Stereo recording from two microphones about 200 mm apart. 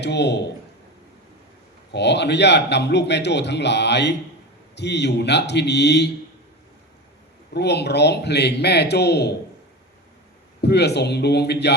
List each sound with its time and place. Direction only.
0.0 s a man's voice: 60° left (ahead or behind)
1.9 s a man's voice: 60° left (ahead or behind)
7.5 s a man's voice: 55° left (ahead or behind)
10.6 s a man's voice: 55° left (ahead or behind)